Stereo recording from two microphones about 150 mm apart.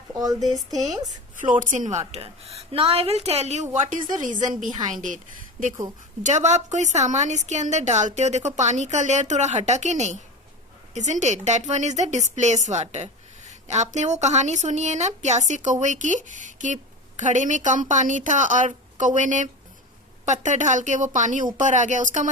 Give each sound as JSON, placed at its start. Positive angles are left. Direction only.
{"t": 0.1, "sound": "speech", "side_deg": -25}
{"t": 1.0, "sound": "a woman's voice", "side_deg": -60}
{"t": 4.2, "sound": "a woman's voice", "side_deg": -60}